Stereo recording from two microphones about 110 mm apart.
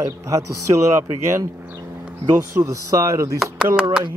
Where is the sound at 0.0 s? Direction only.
30° right (ahead or behind).